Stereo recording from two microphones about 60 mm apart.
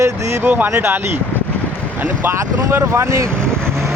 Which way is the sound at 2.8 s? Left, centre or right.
Right.